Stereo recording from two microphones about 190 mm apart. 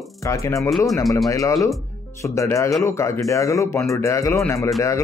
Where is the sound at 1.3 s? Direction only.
15° left (ahead or behind).